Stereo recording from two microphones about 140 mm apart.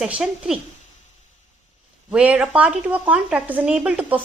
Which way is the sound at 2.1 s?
10° right (ahead or behind).